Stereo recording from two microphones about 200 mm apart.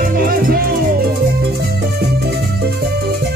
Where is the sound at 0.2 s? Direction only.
50° right (ahead or behind).